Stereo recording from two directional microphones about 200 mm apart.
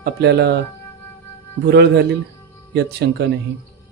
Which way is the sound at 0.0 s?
55° right (ahead or behind).